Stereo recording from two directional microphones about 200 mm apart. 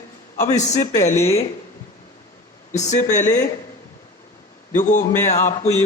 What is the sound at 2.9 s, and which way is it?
Speech, 40° left (ahead or behind).